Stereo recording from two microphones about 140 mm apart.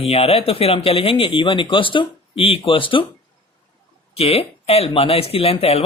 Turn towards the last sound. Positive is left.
turn(degrees=45)  # may be behind; listen again after turning